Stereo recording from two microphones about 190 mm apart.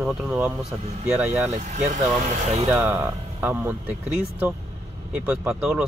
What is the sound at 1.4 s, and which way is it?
Speech, 40° right (ahead or behind).